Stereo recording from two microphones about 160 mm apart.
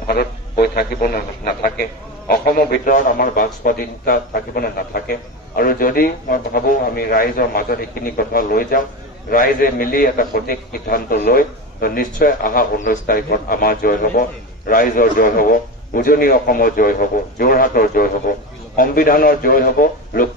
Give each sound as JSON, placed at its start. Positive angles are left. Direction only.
{"t": 0.0, "sound": "a man's voice", "side_deg": 75}